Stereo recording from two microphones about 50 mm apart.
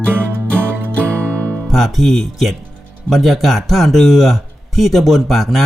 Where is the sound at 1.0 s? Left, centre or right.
Right.